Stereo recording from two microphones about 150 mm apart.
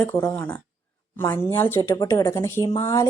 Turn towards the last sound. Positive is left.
turn(degrees=20)  # may be behind; listen again after turning